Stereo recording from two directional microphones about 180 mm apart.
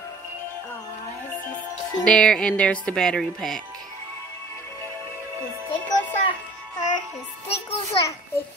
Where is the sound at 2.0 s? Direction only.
5° left (ahead or behind).